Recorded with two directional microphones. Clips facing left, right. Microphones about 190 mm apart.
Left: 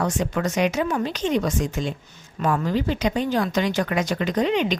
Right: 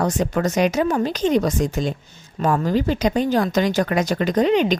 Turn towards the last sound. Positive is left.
turn(degrees=-40)  # may be behind; listen again after turning